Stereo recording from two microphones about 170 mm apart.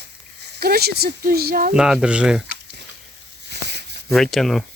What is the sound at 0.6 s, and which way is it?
Speech, 65° right (ahead or behind).